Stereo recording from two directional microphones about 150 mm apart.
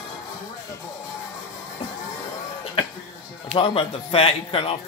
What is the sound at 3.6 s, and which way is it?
Speech, 40° left (ahead or behind).